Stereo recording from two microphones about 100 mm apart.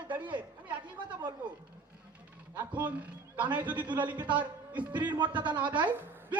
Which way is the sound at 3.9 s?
50° right (ahead or behind).